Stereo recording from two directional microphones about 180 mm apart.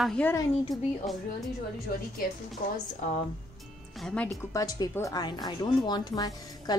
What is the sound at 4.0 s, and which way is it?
Speech, 5° left (ahead or behind).